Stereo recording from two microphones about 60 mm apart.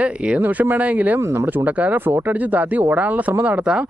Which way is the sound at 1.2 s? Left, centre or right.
Right.